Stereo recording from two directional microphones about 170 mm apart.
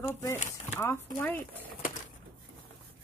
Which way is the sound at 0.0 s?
15° left (ahead or behind).